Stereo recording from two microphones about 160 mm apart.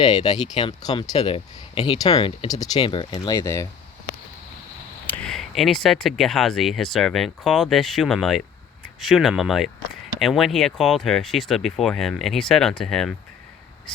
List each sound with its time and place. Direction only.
0.0 s speech: 25° left (ahead or behind)
3.1 s speech: 20° left (ahead or behind)
5.0 s speech: 10° left (ahead or behind)